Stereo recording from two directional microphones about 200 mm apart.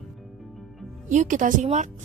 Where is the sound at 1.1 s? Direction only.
40° right (ahead or behind).